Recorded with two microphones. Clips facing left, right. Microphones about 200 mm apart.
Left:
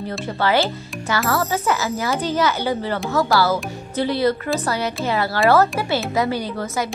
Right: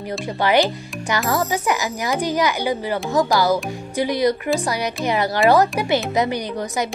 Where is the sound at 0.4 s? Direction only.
15° right (ahead or behind).